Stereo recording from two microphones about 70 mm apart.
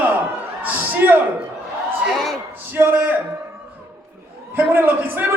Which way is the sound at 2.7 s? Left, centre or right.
Right.